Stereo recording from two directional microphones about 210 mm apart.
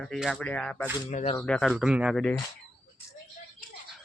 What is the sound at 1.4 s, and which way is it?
Speech, 5° left (ahead or behind).